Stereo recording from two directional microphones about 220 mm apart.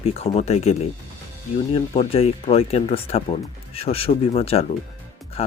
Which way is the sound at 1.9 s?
25° left (ahead or behind).